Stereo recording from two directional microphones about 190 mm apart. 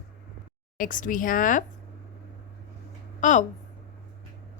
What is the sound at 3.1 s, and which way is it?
Speech, 40° left (ahead or behind).